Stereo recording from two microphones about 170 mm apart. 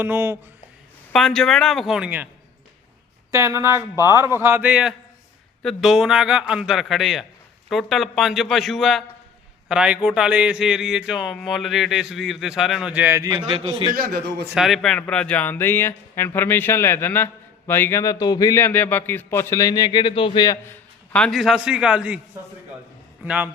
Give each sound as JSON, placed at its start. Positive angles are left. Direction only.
{"t": 0.0, "sound": "a man's voice", "side_deg": -15}
{"t": 1.1, "sound": "speech", "side_deg": 0}
{"t": 3.3, "sound": "a man's voice", "side_deg": -15}
{"t": 13.4, "sound": "a man's voice", "side_deg": -30}
{"t": 13.9, "sound": "a man's voice", "side_deg": -65}
{"t": 14.4, "sound": "a man's voice", "side_deg": 0}
{"t": 21.1, "sound": "speech", "side_deg": 5}
{"t": 23.2, "sound": "a man's voice", "side_deg": -5}